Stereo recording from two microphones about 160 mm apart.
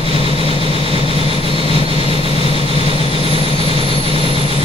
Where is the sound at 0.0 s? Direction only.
35° right (ahead or behind).